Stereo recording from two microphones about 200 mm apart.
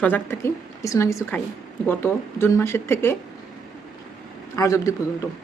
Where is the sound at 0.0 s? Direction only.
10° left (ahead or behind).